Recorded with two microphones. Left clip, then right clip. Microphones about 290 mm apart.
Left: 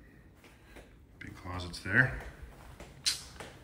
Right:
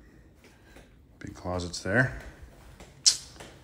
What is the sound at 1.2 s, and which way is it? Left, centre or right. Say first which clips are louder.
Speech: right 8 dB; centre.